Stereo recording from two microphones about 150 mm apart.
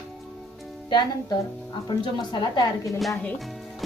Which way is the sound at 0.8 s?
30° left (ahead or behind).